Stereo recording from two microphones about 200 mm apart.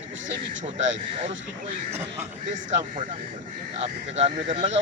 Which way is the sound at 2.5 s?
40° right (ahead or behind).